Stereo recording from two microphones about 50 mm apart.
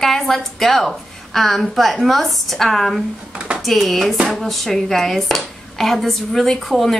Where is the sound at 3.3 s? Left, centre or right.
Right.